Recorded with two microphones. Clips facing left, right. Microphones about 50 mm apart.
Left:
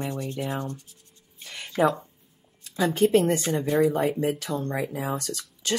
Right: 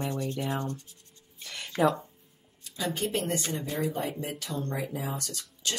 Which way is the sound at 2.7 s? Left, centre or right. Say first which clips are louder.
Left 10 dB; left.